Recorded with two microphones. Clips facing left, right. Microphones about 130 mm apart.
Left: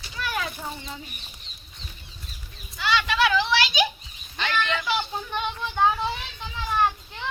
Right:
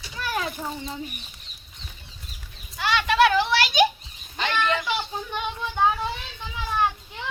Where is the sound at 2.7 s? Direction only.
55° right (ahead or behind).